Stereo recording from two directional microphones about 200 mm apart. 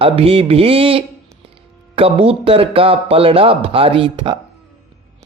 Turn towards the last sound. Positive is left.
turn(degrees=-25)  # may be behind; listen again after turning